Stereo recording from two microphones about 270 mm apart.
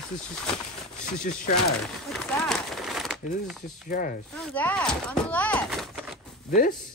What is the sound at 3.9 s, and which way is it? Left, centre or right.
Speech, left.